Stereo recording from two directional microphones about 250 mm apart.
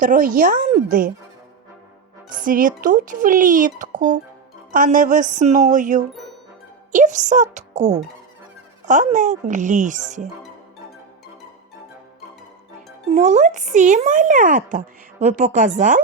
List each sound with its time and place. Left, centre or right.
0.0 s speech: right
2.4 s speech: right
13.1 s speech: right